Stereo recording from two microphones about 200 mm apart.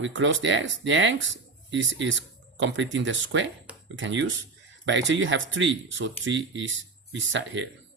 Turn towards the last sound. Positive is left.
turn(degrees=-70)  # may be behind; listen again after turning